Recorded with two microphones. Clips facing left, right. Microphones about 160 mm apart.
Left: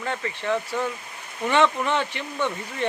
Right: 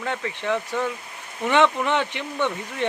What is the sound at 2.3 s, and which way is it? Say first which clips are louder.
Speech: right 2 dB; 10° left (ahead or behind).